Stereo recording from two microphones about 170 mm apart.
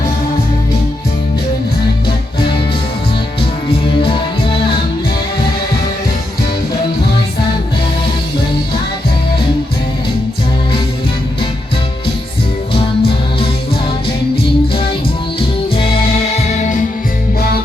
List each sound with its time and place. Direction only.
3.7 s music: 30° left (ahead or behind)
12.7 s music: 35° left (ahead or behind)
15.4 s music: 35° left (ahead or behind)
16.3 s music: 45° left (ahead or behind)